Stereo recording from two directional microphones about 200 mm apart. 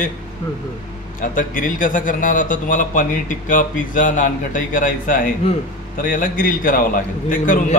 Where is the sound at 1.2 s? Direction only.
40° left (ahead or behind).